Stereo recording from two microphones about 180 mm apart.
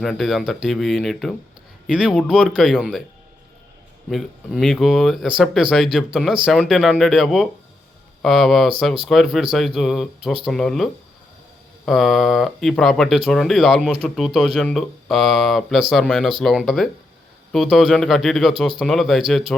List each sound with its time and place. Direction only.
0.0 s speech: centre (ahead or behind)
4.1 s speech: centre (ahead or behind)
11.9 s speech: centre (ahead or behind)